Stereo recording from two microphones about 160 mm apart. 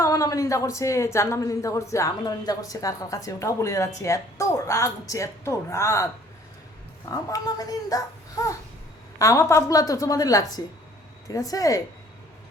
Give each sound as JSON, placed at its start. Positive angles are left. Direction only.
{"t": 0.0, "sound": "a woman's voice", "side_deg": 20}
{"t": 7.1, "sound": "a woman's voice", "side_deg": 20}